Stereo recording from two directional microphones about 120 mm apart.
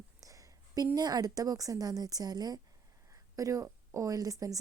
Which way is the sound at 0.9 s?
35° right (ahead or behind).